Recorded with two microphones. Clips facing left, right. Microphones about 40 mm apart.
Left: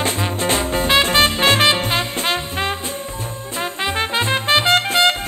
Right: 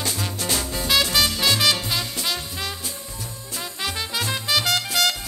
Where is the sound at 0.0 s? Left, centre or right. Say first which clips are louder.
Left 7 dB; left.